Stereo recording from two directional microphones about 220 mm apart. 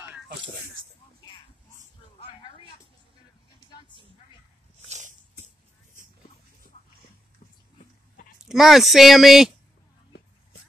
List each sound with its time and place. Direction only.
2.1 s a sound: 25° left (ahead or behind)
4.8 s dog: 30° right (ahead or behind)
6.7 s dog: 30° left (ahead or behind)
8.5 s speech: centre (ahead or behind)